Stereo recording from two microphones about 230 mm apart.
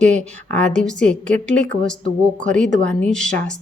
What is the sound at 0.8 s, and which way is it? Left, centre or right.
A woman's voice, centre.